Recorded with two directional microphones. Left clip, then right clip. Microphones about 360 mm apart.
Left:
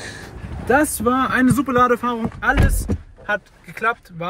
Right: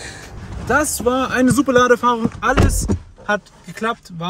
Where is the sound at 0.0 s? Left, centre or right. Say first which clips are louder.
Even; centre.